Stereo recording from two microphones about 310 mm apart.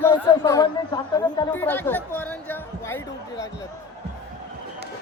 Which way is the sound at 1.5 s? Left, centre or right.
Centre.